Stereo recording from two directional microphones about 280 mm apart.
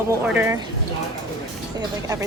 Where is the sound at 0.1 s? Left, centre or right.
Centre.